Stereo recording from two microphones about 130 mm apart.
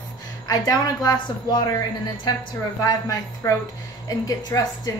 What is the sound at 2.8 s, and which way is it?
A woman's voice, 25° left (ahead or behind).